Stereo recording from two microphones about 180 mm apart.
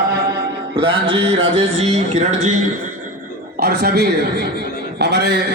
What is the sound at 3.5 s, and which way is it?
A man's voice, 60° right (ahead or behind).